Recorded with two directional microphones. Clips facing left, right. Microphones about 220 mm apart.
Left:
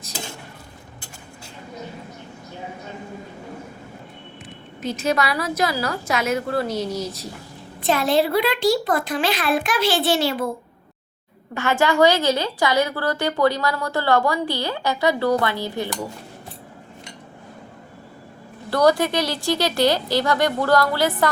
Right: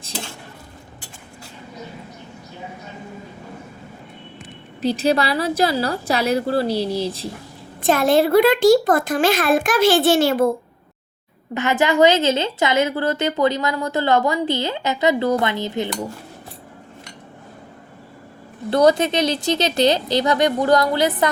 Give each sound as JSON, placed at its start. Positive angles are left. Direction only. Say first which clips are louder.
{"t": 4.8, "sound": "a woman's voice", "louder": "right 4 dB", "side_deg": -35}
{"t": 7.8, "sound": "a child's voice", "louder": "right 3 dB", "side_deg": -50}
{"t": 11.5, "sound": "a woman's voice", "louder": "right 1 dB", "side_deg": -20}
{"t": 18.7, "sound": "a woman's voice", "louder": "right 2 dB", "side_deg": -20}